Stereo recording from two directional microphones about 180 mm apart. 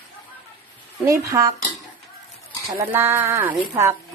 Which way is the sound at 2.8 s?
15° right (ahead or behind).